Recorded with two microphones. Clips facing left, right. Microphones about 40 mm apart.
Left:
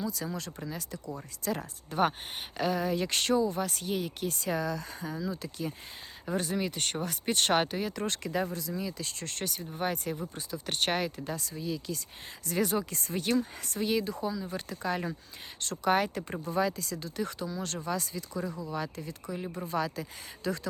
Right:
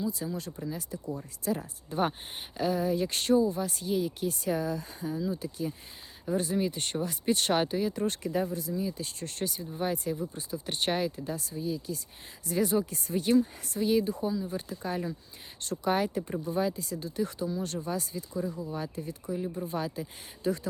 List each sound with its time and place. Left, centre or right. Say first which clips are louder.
0.3 s speech: right 2 dB; left
12.5 s speech: right 2 dB; left
19.4 s speech: right 4 dB; left
19.6 s speech: left 1 dB; left